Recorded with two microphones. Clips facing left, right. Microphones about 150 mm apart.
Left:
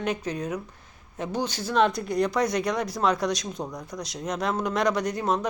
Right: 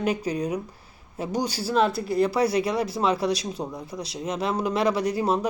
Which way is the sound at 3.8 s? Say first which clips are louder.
Right 1 dB; 30° right (ahead or behind).